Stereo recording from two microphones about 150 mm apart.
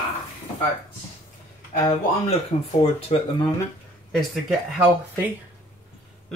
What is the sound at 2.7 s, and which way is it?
Speech, 40° left (ahead or behind).